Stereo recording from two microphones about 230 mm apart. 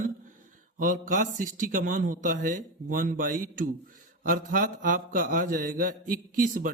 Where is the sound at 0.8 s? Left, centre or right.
Right.